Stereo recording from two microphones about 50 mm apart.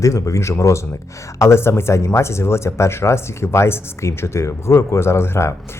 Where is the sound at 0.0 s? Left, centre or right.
Left.